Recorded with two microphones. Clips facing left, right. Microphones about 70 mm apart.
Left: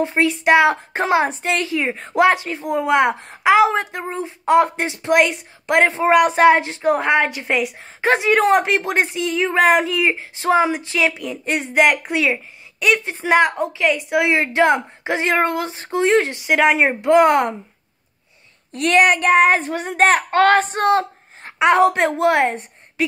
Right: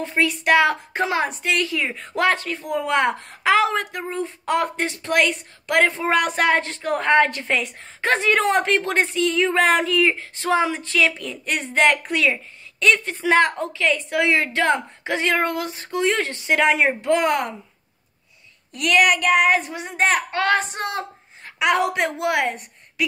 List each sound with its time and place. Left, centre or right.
0.0 s a woman's voice: left
18.7 s a child's voice: left
21.5 s a woman's voice: left